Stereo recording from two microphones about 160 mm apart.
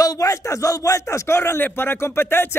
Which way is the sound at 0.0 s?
20° left (ahead or behind).